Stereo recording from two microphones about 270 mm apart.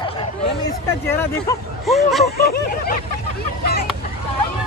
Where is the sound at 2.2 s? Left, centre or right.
Left.